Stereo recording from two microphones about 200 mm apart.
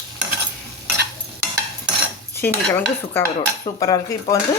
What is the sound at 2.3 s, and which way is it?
Speech, 10° left (ahead or behind).